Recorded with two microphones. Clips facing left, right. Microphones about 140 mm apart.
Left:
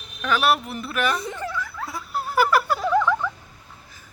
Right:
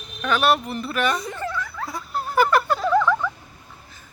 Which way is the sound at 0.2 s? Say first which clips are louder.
Right 1 dB; centre (ahead or behind).